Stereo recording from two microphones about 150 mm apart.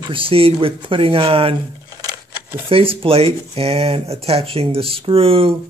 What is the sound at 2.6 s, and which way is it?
Speech, 40° right (ahead or behind).